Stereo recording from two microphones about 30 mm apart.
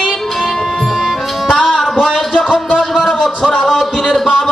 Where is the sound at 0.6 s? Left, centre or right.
Centre.